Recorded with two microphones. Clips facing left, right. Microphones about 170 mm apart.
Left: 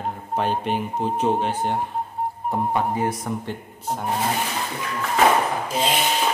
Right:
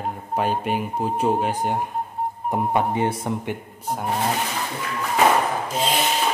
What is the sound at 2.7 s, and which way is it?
Speech, 20° right (ahead or behind).